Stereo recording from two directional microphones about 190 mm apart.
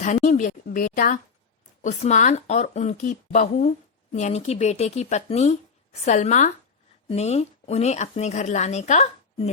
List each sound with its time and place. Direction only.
0.0 s speech: 40° left (ahead or behind)